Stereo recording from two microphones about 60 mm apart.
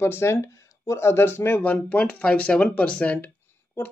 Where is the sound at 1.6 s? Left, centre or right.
Left.